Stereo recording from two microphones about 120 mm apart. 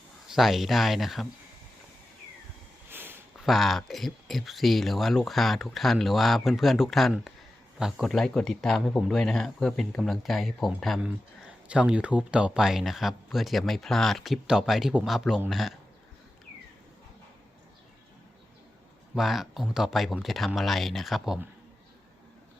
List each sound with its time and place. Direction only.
0.3 s speech: centre (ahead or behind)
2.9 s a sound: 20° right (ahead or behind)
3.3 s speech: centre (ahead or behind)
19.1 s speech: centre (ahead or behind)